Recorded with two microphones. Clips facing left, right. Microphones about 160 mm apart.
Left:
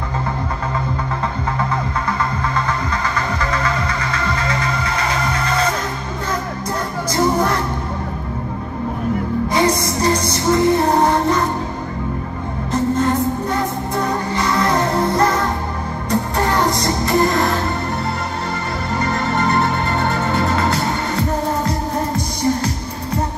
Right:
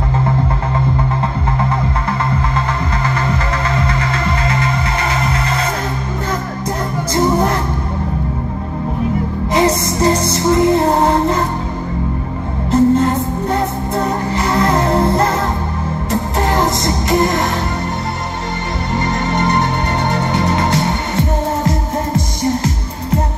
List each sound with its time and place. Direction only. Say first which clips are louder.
3.2 s music: right 2 dB; 30° right (ahead or behind)
9.5 s music: right 4 dB; 25° right (ahead or behind)
12.7 s music: right 5 dB; 30° right (ahead or behind)
18.9 s music: right 2 dB; 20° right (ahead or behind)